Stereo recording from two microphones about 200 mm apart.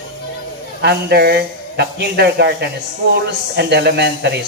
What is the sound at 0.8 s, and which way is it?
A man's voice, 55° right (ahead or behind).